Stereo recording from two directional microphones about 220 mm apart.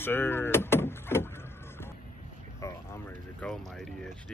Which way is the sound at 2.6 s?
10° left (ahead or behind).